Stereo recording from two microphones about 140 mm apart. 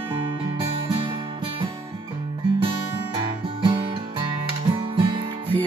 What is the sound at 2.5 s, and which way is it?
Music, 40° right (ahead or behind).